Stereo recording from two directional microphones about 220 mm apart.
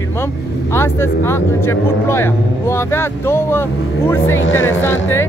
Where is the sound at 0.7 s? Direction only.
10° left (ahead or behind).